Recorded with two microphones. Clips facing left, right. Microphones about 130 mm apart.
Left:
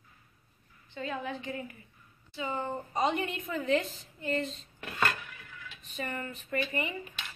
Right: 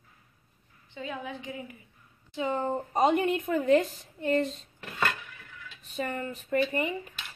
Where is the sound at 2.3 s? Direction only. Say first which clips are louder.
Right 5 dB; 45° right (ahead or behind).